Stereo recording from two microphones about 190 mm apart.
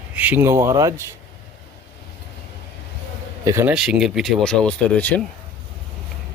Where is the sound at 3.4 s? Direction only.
15° right (ahead or behind); by 5.2 s 10° left (ahead or behind).